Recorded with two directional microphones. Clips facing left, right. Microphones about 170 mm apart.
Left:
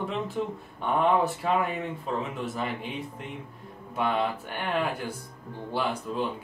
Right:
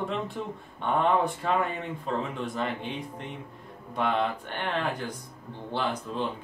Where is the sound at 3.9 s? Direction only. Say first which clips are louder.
Even; 5° left (ahead or behind).